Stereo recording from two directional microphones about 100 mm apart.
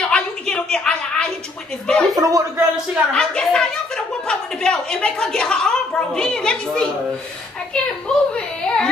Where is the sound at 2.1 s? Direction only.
35° right (ahead or behind).